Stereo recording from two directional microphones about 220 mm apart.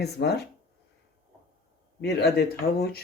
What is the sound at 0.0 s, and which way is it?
Speech, 50° left (ahead or behind).